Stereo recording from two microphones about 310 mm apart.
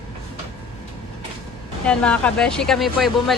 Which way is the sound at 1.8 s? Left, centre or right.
Centre.